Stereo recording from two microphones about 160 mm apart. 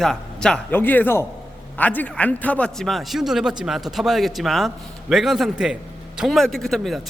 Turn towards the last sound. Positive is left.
turn(degrees=0)  # may be behind; listen again after turning